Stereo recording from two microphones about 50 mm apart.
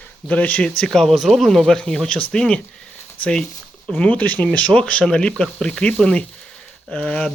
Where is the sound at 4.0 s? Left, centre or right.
Left.